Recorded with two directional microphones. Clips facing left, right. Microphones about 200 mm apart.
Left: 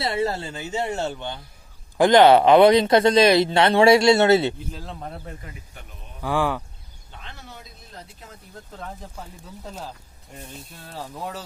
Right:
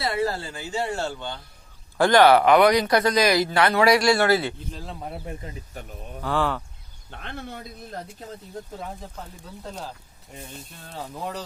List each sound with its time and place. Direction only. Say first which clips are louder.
0.0 s speech: left 1 dB; 25° left (ahead or behind)
4.7 s a man's voice: even; 5° right (ahead or behind)
5.2 s speech: right 3 dB; 20° right (ahead or behind)
5.7 s speech: right 7 dB; 40° right (ahead or behind)
6.2 s speech: left 2 dB; 15° left (ahead or behind)
7.1 s speech: right 7 dB; 60° right (ahead or behind)
8.8 s speech: right 1 dB; 5° right (ahead or behind)
10.3 s speech: even; centre (ahead or behind)